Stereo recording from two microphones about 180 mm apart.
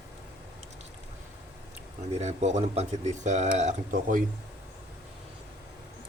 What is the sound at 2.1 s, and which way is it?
Speech, 40° right (ahead or behind).